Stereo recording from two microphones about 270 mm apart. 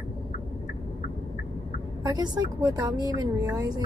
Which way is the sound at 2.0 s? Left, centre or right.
Centre.